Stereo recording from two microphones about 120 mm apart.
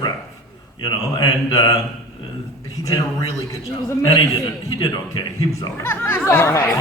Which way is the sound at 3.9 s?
35° left (ahead or behind).